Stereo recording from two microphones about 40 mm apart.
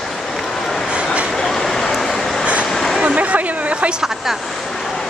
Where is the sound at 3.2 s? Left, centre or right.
Right.